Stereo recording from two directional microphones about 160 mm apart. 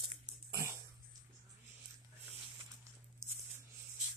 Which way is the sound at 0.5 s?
20° right (ahead or behind).